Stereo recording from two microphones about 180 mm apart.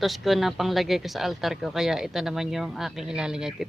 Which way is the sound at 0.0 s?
Centre (ahead or behind).